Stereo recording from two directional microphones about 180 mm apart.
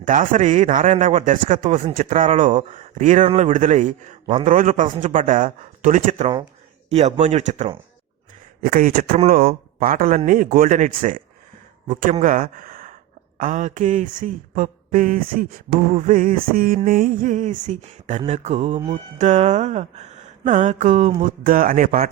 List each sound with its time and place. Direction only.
0.0 s speech: 45° right (ahead or behind)
6.9 s music: 40° right (ahead or behind)
8.6 s speech: 50° right (ahead or behind)
18.3 s music: 40° right (ahead or behind)
19.3 s speech: 40° right (ahead or behind)